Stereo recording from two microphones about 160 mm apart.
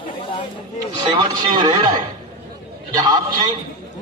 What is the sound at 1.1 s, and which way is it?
A man's voice, 25° right (ahead or behind).